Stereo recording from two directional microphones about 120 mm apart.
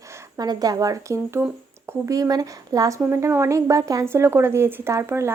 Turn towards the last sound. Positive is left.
turn(degrees=-20)  # may be behind; listen again after turning